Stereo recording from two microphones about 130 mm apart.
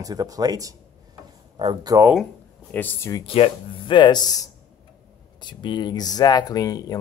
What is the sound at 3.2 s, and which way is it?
Speech, 45° left (ahead or behind).